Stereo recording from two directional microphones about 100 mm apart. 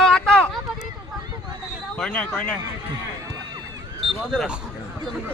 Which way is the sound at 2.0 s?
10° left (ahead or behind).